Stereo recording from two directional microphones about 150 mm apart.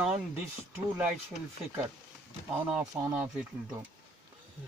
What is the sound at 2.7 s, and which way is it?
Speech, 5° right (ahead or behind).